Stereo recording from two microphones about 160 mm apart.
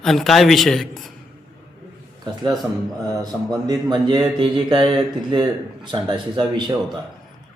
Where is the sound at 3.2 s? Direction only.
25° right (ahead or behind).